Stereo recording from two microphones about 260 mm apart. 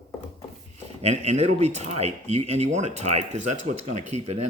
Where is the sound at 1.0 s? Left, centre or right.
Right.